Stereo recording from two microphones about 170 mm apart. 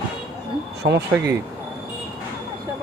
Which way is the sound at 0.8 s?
75° right (ahead or behind).